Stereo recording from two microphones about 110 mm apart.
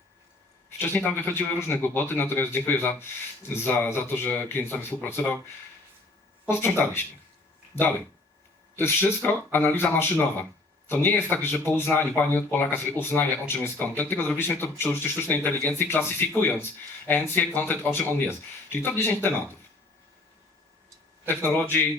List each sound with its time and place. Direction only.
0.8 s speech: 20° left (ahead or behind)
6.5 s speech: 20° left (ahead or behind)
21.2 s speech: 20° left (ahead or behind)